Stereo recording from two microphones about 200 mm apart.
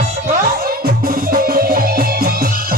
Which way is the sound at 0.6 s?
45° right (ahead or behind).